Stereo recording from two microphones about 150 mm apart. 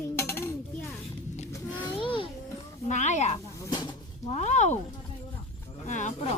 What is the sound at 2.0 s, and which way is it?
Speech, 35° left (ahead or behind).